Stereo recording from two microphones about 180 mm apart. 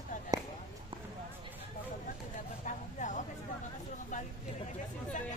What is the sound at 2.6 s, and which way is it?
Vehicle, 45° left (ahead or behind).